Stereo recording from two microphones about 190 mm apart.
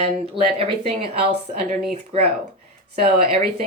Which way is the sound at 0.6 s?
30° right (ahead or behind).